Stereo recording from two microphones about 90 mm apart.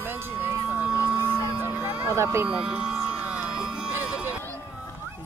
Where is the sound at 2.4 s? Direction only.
10° right (ahead or behind).